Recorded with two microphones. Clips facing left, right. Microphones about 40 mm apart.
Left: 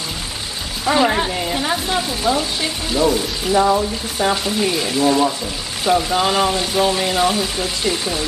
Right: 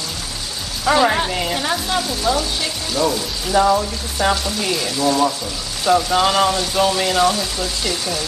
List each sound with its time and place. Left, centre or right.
0.8 s speech: centre
2.0 s speech: centre
3.1 s speech: centre
4.5 s speech: centre
6.1 s speech: centre
6.5 s speech: left